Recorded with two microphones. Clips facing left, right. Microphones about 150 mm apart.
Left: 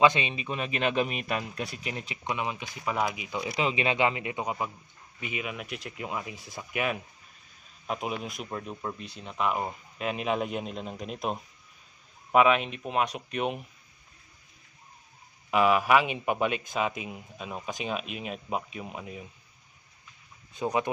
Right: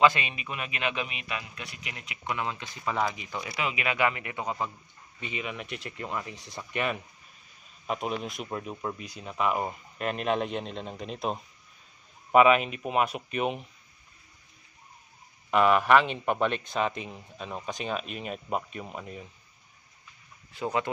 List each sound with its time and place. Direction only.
0.0 s a man's voice: 20° left (ahead or behind)
2.2 s speech: 15° left (ahead or behind)
3.5 s speech: 25° left (ahead or behind); by 13.7 s centre (ahead or behind)
15.5 s speech: 5° left (ahead or behind)
20.5 s speech: 15° left (ahead or behind)